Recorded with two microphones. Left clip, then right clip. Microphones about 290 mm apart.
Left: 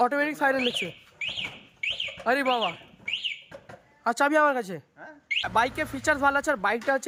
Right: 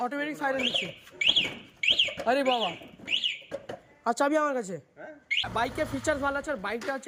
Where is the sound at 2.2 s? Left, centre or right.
Centre.